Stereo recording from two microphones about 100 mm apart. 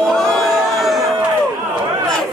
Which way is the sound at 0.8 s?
Centre (ahead or behind).